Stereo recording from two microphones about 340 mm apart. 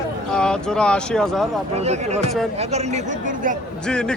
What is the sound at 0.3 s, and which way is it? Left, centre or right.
A man's voice, centre.